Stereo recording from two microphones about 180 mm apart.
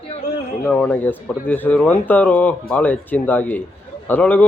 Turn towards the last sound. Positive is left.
turn(degrees=10)  # may be behind; listen again after turning